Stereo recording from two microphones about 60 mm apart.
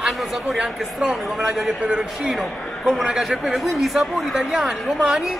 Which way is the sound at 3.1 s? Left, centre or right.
Centre.